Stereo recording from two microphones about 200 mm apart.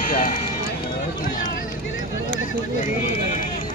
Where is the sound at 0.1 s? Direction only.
40° left (ahead or behind).